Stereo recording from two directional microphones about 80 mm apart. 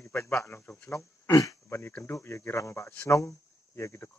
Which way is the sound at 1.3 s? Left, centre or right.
Left.